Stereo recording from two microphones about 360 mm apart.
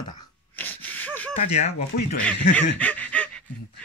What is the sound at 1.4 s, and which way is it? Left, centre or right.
Speech, centre.